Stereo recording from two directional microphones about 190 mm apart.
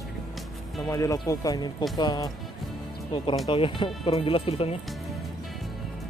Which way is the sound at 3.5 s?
25° left (ahead or behind).